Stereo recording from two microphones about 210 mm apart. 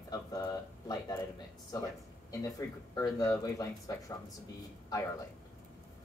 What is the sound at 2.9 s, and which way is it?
Speech, 15° left (ahead or behind).